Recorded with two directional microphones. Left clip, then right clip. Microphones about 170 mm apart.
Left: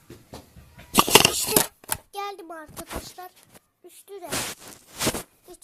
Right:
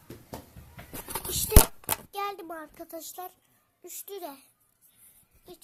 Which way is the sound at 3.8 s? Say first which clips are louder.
Right 1 dB; 35° right (ahead or behind).